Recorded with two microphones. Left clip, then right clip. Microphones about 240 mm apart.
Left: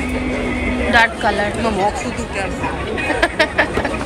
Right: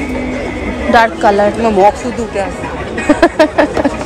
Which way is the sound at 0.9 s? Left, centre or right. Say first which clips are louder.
Right 6 dB; right.